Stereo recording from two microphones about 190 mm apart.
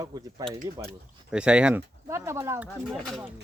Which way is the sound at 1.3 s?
5° right (ahead or behind).